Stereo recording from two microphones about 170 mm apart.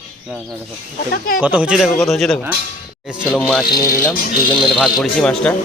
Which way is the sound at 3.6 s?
60° left (ahead or behind).